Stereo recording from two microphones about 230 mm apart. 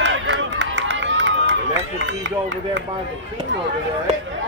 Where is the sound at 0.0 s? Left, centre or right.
Right.